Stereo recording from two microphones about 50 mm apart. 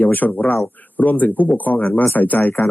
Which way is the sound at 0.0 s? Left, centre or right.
Left.